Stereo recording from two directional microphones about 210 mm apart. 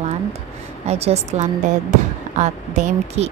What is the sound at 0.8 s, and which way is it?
Speech, 30° right (ahead or behind).